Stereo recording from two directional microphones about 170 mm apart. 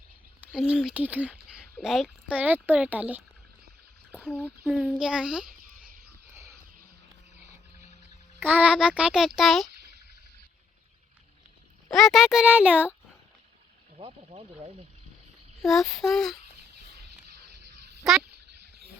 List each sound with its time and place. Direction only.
0.4 s speech: 5° right (ahead or behind)
4.1 s speech: 10° left (ahead or behind)
4.6 s a child's voice: 5° right (ahead or behind)
8.4 s a child's voice: 10° right (ahead or behind)
11.9 s a child's voice: centre (ahead or behind)
13.9 s speech: 35° right (ahead or behind)
15.6 s a child's voice: centre (ahead or behind)